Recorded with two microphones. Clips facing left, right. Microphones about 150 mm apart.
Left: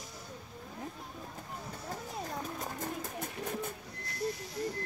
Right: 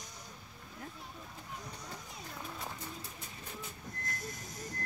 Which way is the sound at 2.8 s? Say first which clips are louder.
Left 9 dB; 55° left (ahead or behind).